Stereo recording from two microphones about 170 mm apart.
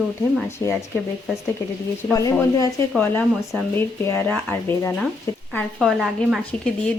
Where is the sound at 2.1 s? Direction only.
20° left (ahead or behind).